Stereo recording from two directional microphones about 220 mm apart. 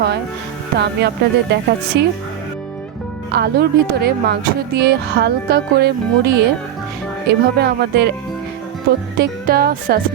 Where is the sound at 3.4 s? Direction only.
45° right (ahead or behind).